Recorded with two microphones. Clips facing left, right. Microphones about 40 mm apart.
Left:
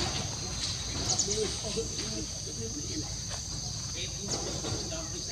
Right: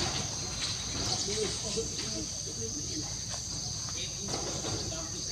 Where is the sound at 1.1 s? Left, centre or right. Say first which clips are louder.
Left 2 dB; centre.